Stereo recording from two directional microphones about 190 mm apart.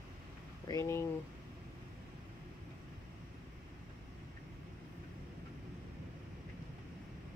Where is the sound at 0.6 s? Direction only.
15° left (ahead or behind).